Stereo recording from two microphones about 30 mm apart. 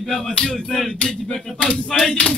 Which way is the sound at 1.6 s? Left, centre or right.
Left.